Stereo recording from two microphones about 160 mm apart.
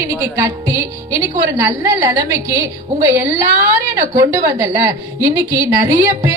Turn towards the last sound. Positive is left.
turn(degrees=-15)  # may be behind; listen again after turning